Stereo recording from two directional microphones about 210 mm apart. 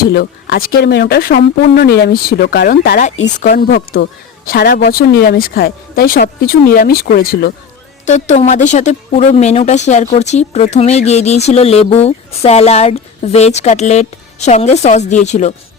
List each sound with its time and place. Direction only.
0.0 s a woman's voice: 50° left (ahead or behind)
8.0 s a woman's voice: 35° left (ahead or behind)